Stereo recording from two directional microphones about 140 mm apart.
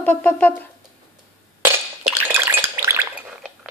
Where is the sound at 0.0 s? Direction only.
10° left (ahead or behind).